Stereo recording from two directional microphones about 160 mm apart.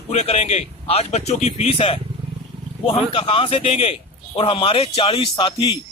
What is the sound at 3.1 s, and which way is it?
A man's voice, 35° left (ahead or behind).